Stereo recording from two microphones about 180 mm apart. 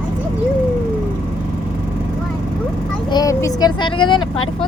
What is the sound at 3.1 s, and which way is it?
Vehicle, 20° left (ahead or behind).